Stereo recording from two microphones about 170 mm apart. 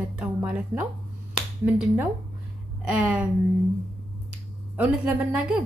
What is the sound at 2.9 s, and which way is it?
Speech, 5° right (ahead or behind).